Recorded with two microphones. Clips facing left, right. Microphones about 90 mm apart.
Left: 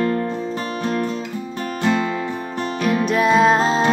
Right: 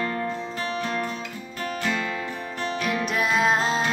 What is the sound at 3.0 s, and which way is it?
Music, 5° right (ahead or behind).